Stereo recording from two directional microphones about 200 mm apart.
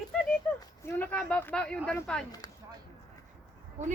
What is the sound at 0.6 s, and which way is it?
Speech, 10° left (ahead or behind).